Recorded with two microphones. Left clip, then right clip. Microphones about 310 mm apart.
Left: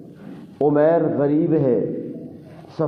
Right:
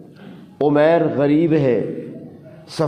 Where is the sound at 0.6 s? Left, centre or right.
Right.